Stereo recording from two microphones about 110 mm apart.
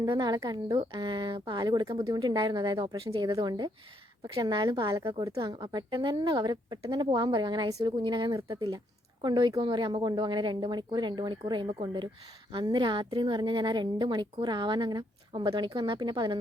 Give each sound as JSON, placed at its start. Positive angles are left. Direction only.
{"t": 0.0, "sound": "a woman's voice", "side_deg": -40}
{"t": 8.4, "sound": "a woman's voice", "side_deg": -30}
{"t": 9.2, "sound": "a woman's voice", "side_deg": -40}